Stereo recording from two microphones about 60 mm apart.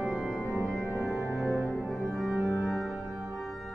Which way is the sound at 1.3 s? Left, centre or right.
Centre.